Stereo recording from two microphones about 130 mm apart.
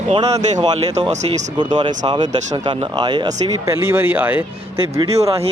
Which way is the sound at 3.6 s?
20° right (ahead or behind).